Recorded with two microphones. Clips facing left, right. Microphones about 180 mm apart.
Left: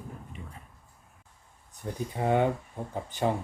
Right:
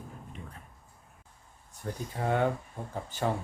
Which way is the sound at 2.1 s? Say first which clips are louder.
Left 4 dB; 15° left (ahead or behind).